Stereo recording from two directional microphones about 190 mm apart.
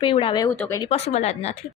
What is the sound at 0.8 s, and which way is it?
Speech, 35° left (ahead or behind).